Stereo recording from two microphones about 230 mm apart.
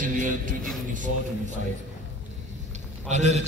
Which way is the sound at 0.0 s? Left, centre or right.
Right.